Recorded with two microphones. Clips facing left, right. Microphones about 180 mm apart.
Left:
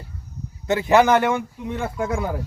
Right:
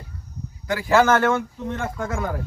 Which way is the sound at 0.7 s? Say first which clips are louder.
Left 2 dB; 20° left (ahead or behind).